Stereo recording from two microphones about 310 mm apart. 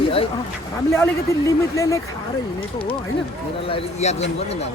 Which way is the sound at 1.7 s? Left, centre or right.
Centre.